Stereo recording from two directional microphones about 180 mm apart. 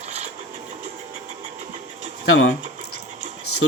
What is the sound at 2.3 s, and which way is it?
Speech, 90° left.